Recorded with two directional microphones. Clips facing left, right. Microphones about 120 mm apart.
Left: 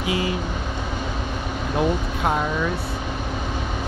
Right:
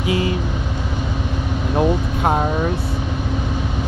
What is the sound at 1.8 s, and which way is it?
Vehicle, 35° right (ahead or behind).